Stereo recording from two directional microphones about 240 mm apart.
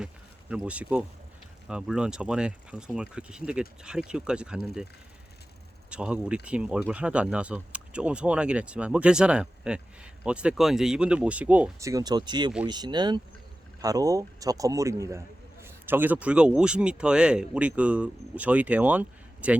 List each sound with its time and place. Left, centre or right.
0.5 s speech: centre
5.9 s a man's voice: centre